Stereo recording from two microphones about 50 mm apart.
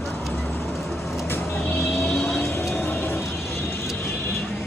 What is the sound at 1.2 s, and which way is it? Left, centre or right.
Vehicle, left.